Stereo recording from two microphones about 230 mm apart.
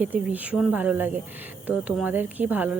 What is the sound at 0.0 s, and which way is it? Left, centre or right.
Speech, centre.